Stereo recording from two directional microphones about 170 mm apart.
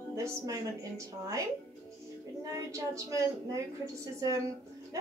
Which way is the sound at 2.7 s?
20° right (ahead or behind).